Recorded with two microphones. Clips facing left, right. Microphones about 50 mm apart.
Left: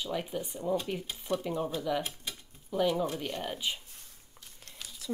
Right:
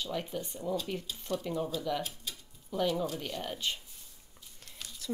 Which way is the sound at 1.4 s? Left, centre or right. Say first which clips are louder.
Left 1 dB; centre.